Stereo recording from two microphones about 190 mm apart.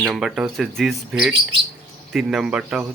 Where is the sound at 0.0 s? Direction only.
Centre (ahead or behind).